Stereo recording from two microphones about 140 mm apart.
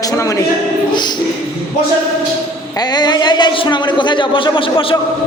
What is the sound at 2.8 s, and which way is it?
A woman's voice, 30° left (ahead or behind).